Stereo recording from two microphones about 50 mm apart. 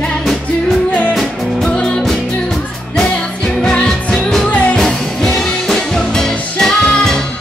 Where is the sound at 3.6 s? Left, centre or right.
Centre.